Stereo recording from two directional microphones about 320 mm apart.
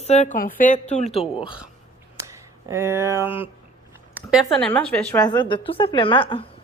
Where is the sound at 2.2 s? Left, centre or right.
Centre.